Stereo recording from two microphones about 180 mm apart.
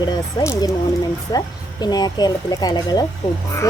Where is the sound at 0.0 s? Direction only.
25° left (ahead or behind).